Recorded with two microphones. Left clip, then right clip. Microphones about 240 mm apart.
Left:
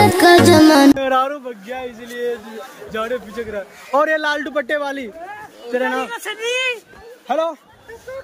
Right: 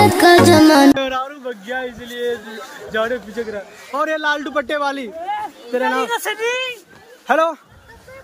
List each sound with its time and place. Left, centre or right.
0.0 s music: centre
2.9 s speech: centre
4.1 s a man's voice: centre
6.0 s speech: right
7.2 s speech: centre